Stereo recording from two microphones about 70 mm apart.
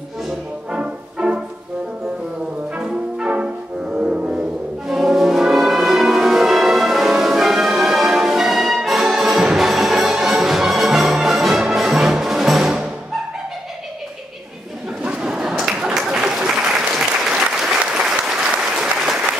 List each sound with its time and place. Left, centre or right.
0.7 s music: centre
3.2 s music: centre
15.0 s applause: centre